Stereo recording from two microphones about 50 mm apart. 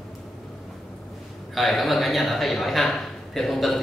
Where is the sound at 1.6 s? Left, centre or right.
Centre.